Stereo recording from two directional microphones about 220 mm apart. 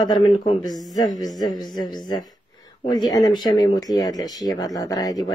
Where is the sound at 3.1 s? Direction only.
20° left (ahead or behind).